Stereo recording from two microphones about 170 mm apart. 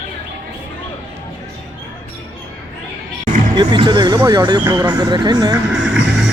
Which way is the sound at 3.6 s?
25° right (ahead or behind).